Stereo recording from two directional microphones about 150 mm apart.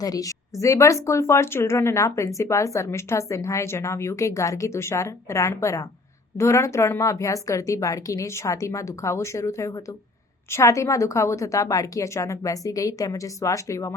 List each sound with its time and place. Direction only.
0.0 s a woman's voice: 25° left (ahead or behind)